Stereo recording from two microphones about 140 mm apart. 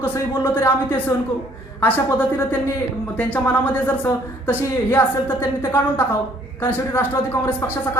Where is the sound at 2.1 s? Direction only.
15° left (ahead or behind).